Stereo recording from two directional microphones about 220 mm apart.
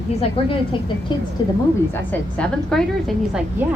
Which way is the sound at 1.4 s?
20° left (ahead or behind).